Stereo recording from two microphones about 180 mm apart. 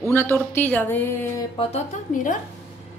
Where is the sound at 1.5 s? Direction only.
40° left (ahead or behind).